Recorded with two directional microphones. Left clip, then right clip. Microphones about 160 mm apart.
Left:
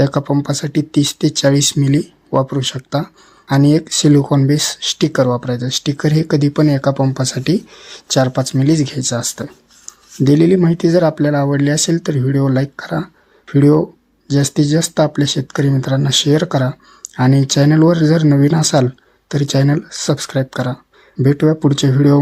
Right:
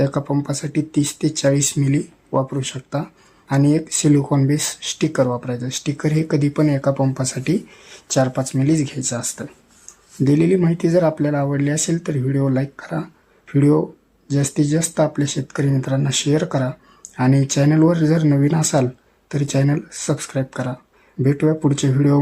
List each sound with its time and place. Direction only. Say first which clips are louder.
0.0 s speech: left 5 dB; 30° left (ahead or behind)